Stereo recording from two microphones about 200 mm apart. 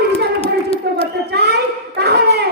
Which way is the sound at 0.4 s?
30° left (ahead or behind).